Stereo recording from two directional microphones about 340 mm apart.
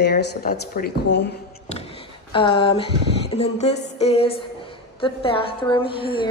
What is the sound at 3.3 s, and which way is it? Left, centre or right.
A woman's voice, centre.